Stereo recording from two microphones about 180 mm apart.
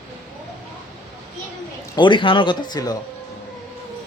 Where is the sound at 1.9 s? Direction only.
25° left (ahead or behind).